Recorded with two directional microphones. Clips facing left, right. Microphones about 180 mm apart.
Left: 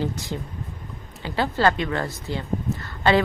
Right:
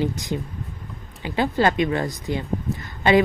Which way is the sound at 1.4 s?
15° right (ahead or behind).